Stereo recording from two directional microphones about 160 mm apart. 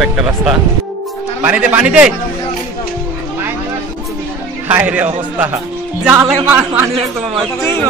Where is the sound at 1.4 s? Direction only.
10° right (ahead or behind).